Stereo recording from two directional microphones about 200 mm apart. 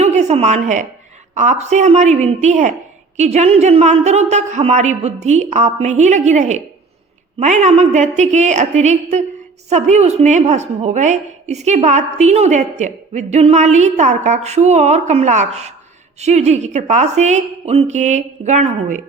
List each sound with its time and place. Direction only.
0.0 s a woman's voice: 35° right (ahead or behind)